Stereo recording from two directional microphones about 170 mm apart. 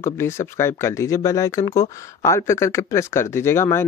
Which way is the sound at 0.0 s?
15° left (ahead or behind).